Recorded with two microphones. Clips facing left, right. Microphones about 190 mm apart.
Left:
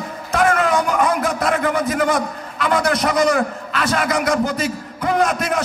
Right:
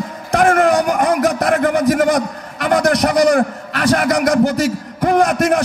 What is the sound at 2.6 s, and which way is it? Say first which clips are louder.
Speech: right 4 dB; 50° right (ahead or behind).